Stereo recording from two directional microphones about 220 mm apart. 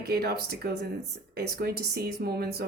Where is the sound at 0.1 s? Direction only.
45° right (ahead or behind).